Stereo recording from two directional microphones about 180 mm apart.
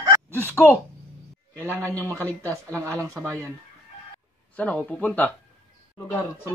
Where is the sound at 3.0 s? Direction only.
5° left (ahead or behind).